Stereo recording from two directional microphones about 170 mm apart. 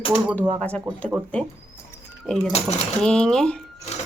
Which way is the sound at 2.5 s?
40° left (ahead or behind).